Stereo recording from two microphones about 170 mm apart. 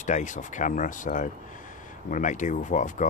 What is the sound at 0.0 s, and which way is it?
Speech, 45° left (ahead or behind).